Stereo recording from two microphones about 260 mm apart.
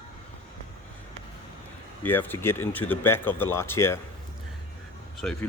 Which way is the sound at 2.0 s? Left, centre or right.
Centre.